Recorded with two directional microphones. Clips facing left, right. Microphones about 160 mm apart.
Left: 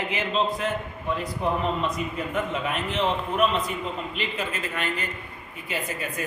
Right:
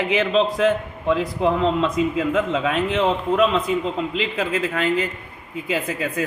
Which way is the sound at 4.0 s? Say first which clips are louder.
Right 8 dB; 90° right.